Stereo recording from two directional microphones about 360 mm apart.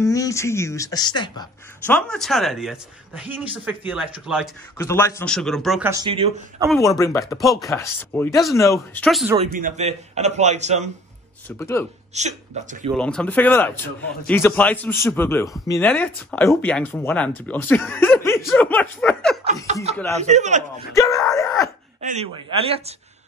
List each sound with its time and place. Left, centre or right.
0.0 s speech: centre
4.7 s speech: centre
6.7 s speech: centre
9.4 s a man's voice: right
11.4 s speech: centre
12.1 s a man's voice: centre
12.9 s speech: centre
19.4 s a man's voice: centre
20.9 s speech: centre
22.0 s speech: centre